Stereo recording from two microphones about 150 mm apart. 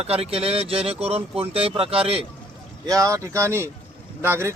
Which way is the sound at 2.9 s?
20° right (ahead or behind).